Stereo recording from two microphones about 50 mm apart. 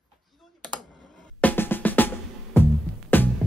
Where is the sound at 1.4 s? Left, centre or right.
Left.